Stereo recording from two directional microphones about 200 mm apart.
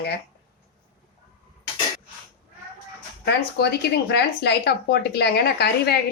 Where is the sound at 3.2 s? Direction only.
55° left (ahead or behind).